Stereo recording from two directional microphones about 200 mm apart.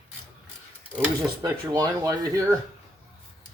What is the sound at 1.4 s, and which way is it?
Speech, 20° right (ahead or behind).